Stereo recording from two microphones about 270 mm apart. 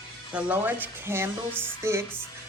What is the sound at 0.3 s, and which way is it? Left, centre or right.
A woman's voice, centre.